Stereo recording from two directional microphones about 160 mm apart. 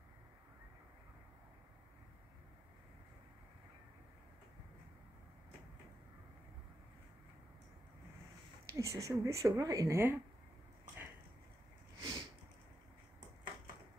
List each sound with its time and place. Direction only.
8.6 s speech: 20° right (ahead or behind)
12.0 s sniff: 30° right (ahead or behind)